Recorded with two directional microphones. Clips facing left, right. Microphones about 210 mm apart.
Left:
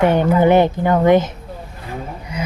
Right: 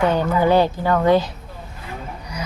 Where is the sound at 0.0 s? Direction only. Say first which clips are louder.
Left 4 dB; 20° left (ahead or behind).